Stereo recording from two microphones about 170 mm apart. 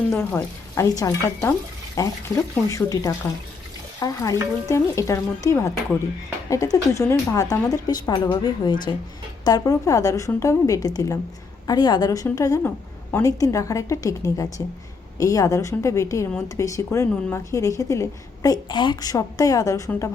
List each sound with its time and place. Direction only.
0.1 s a woman's voice: 10° left (ahead or behind)